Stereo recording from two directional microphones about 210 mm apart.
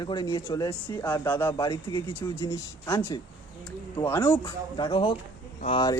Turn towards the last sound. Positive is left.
turn(degrees=20)  # may be behind; listen again after turning